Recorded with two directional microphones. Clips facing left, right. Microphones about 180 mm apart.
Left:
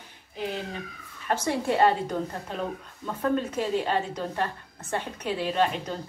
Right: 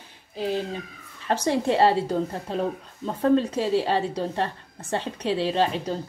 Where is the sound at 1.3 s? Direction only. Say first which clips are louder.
Right 3 dB; 25° right (ahead or behind).